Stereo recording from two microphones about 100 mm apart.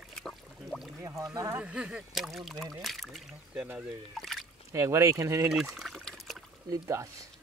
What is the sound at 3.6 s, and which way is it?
Speech, 10° right (ahead or behind).